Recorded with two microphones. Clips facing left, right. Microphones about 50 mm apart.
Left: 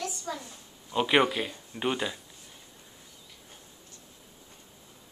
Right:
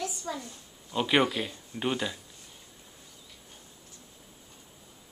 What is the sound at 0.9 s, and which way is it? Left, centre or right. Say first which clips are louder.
Speech: left 1 dB; centre.